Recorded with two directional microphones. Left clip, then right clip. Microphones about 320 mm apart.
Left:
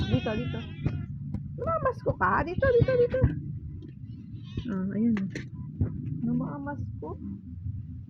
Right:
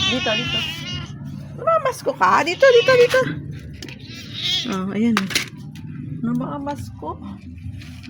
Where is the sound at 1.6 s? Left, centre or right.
Centre.